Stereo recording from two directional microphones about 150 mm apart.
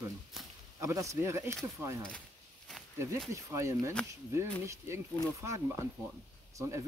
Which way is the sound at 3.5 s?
20° right (ahead or behind).